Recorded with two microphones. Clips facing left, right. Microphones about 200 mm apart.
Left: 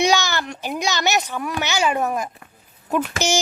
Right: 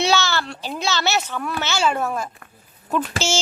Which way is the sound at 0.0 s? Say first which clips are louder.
Left 1 dB; 15° left (ahead or behind).